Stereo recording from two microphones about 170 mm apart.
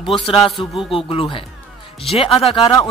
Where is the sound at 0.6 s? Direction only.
30° left (ahead or behind).